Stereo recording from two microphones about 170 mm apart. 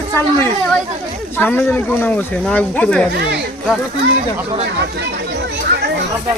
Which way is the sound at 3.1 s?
80° right.